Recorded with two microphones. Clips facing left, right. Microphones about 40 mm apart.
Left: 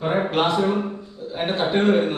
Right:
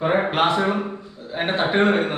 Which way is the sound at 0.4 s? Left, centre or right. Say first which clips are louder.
Right 1 dB; right.